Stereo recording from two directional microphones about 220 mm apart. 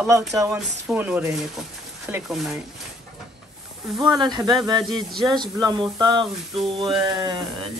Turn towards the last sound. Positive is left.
turn(degrees=-20)  # may be behind; listen again after turning